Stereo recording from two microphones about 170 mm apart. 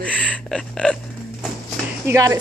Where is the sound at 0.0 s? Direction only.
5° left (ahead or behind).